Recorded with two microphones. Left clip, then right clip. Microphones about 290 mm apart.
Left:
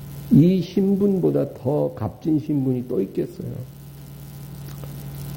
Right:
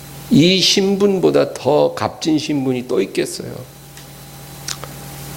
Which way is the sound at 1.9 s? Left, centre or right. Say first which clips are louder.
Right 6 dB; centre.